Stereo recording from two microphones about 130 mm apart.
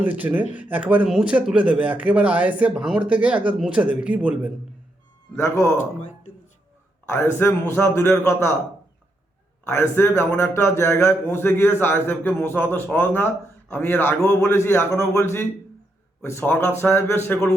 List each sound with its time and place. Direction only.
0.0 s speech: 10° right (ahead or behind)
5.3 s a man's voice: 20° left (ahead or behind)
7.1 s a man's voice: 20° left (ahead or behind)
9.6 s a man's voice: 20° left (ahead or behind)